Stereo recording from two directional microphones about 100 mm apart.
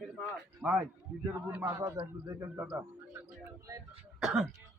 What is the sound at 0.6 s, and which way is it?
Speech, 10° right (ahead or behind).